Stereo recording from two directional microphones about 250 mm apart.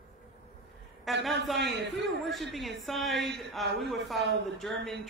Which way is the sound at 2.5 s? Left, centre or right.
Centre.